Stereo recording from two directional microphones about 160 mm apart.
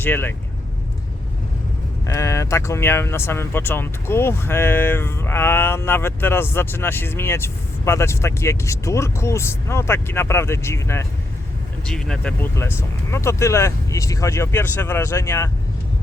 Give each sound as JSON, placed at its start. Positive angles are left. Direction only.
{"t": 0.0, "sound": "speech", "side_deg": 15}
{"t": 2.0, "sound": "speech", "side_deg": 20}
{"t": 11.9, "sound": "speech", "side_deg": 5}